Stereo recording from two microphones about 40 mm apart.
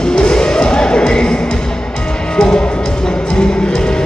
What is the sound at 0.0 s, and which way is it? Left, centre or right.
Music, left.